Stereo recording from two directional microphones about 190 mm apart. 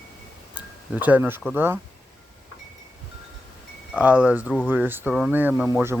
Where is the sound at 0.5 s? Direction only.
10° right (ahead or behind).